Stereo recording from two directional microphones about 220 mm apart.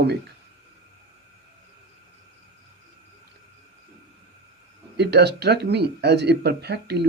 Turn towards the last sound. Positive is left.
turn(degrees=-50)  # may be behind; listen again after turning